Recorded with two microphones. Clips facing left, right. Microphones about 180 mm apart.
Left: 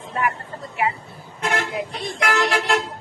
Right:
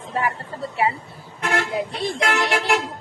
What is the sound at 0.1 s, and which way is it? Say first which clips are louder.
Chatter: even; 30° right (ahead or behind).